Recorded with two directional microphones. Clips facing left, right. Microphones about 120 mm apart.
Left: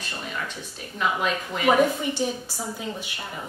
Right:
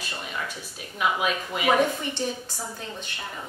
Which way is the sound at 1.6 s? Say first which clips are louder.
Left 3 dB; 5° left (ahead or behind).